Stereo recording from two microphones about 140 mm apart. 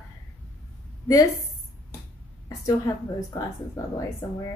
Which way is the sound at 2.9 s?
25° left (ahead or behind).